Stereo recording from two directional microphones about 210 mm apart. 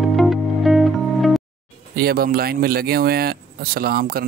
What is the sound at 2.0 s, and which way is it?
Speech, 45° right (ahead or behind).